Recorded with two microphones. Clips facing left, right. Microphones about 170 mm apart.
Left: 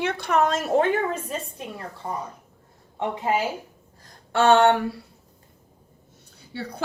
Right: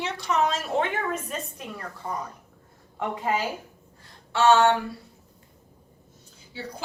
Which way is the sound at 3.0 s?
25° left (ahead or behind).